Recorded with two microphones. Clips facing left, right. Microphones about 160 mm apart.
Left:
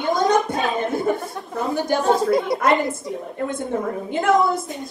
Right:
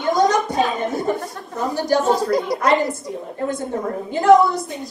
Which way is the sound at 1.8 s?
Centre (ahead or behind).